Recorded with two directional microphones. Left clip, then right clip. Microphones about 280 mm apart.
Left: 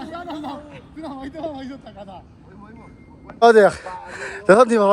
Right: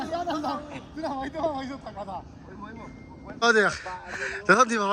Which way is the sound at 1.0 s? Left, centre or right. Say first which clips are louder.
Right 2 dB; left.